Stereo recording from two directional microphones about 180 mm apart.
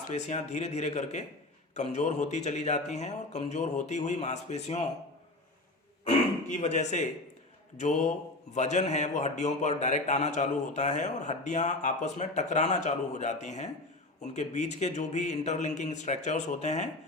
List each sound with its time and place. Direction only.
0.1 s a man's voice: 40° left (ahead or behind)
6.5 s a man's voice: 40° left (ahead or behind)